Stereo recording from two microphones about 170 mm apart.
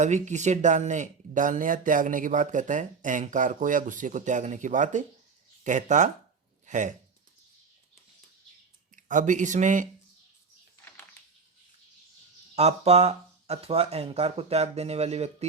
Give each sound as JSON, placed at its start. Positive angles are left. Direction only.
{"t": 0.0, "sound": "speech", "side_deg": -45}
{"t": 9.0, "sound": "speech", "side_deg": -50}
{"t": 12.5, "sound": "speech", "side_deg": -40}